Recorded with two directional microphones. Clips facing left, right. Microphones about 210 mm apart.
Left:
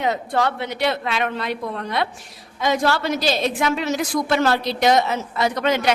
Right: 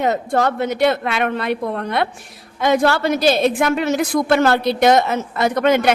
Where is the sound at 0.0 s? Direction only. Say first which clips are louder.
Right 4 dB; 45° right (ahead or behind).